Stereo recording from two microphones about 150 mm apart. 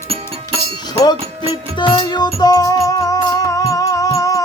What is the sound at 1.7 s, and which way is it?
Music, 30° left (ahead or behind).